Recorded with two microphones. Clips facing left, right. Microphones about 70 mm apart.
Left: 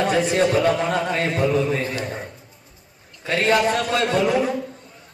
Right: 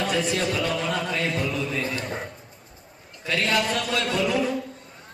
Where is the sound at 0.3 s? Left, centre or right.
Left.